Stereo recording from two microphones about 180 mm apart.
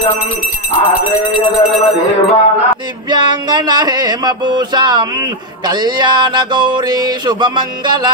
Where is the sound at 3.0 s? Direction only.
25° right (ahead or behind).